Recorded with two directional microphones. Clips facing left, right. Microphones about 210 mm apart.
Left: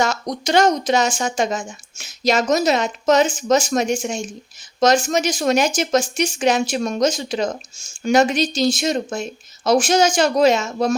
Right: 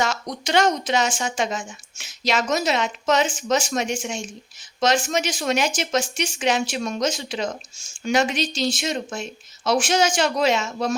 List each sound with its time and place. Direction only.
0.0 s speech: 40° left (ahead or behind)